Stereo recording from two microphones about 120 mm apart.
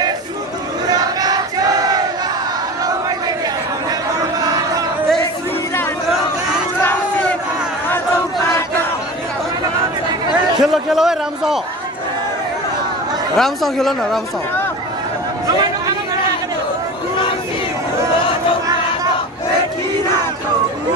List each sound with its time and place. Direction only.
0.8 s battle cry: 35° right (ahead or behind)
6.8 s battle cry: 15° left (ahead or behind)
8.4 s battle cry: 25° left (ahead or behind)
10.6 s a man's voice: 5° right (ahead or behind)
13.4 s speech: centre (ahead or behind)